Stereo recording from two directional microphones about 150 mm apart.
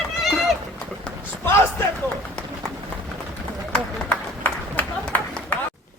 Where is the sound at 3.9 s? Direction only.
10° left (ahead or behind).